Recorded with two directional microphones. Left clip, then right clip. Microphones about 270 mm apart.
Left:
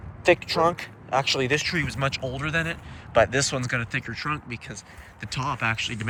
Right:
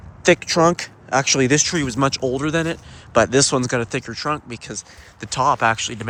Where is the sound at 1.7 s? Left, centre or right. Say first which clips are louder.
Right 6 dB; centre.